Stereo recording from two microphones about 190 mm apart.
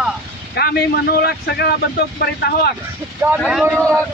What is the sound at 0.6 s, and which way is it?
A man's voice, 55° left (ahead or behind).